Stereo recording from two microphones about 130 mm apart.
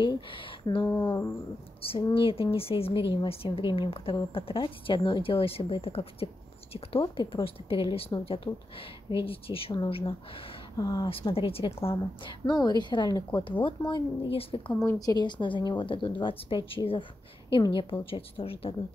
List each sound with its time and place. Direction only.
0.0 s speech: 35° left (ahead or behind)
0.8 s speech: 20° left (ahead or behind)
1.8 s a woman's voice: 45° left (ahead or behind)
8.5 s speech: 20° left (ahead or behind)
9.1 s a woman's voice: 45° left (ahead or behind)
10.8 s a woman's voice: 30° left (ahead or behind)
11.1 s a woman's voice: 45° left (ahead or behind)
14.9 s a woman's voice: 30° left (ahead or behind); by 18.8 s 45° left (ahead or behind)